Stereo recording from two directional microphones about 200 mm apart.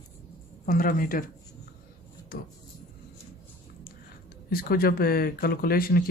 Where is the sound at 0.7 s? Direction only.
45° left (ahead or behind).